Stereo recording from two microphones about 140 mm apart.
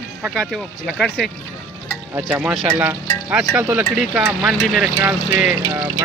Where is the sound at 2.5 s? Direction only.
Centre (ahead or behind).